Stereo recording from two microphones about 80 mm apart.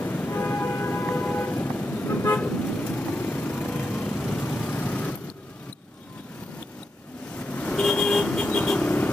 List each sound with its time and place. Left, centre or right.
0.0 s train: left
7.3 s vehicle: centre
7.7 s vehicle: centre